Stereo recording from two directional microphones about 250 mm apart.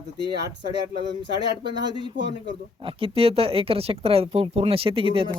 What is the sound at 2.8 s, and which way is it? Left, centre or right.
Speech, right.